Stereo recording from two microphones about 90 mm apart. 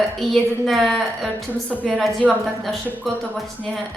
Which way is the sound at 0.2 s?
Centre (ahead or behind).